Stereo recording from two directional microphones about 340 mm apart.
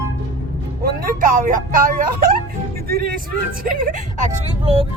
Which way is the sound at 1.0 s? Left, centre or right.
Right.